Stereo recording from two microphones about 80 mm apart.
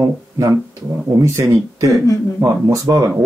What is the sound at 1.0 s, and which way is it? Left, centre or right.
Speech, right.